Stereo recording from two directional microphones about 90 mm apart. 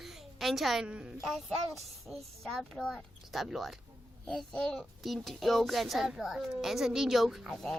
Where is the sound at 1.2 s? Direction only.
Centre (ahead or behind).